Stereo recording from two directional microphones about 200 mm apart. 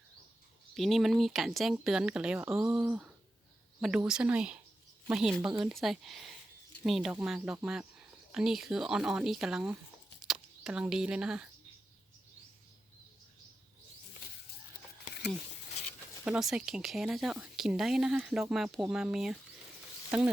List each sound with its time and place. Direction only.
0.7 s speech: centre (ahead or behind)
15.1 s a sound: 40° left (ahead or behind)
16.2 s speech: 5° right (ahead or behind)